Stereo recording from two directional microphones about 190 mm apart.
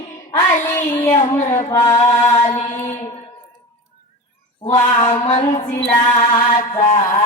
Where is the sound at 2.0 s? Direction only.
35° left (ahead or behind).